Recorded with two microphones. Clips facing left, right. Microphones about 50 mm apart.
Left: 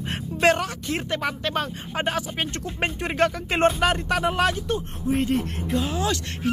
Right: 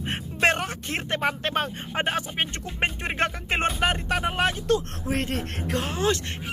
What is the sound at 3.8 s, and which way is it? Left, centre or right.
Speech, centre.